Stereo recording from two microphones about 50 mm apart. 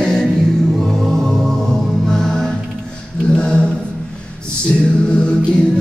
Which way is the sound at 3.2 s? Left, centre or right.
Centre.